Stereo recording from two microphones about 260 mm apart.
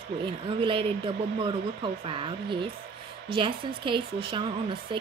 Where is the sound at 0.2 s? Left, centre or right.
Centre.